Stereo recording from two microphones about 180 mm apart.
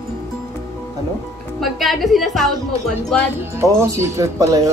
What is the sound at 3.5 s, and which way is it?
Speech, 15° right (ahead or behind).